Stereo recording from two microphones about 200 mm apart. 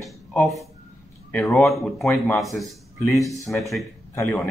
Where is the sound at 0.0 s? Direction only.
5° left (ahead or behind).